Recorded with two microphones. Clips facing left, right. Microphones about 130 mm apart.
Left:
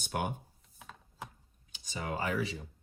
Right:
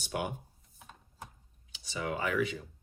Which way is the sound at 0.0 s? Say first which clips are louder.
Even; 50° left (ahead or behind).